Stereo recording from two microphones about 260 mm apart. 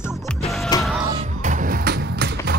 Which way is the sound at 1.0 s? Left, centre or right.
Centre.